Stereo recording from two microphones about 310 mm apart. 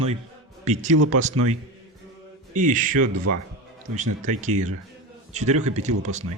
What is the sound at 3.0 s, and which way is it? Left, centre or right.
Speech, right.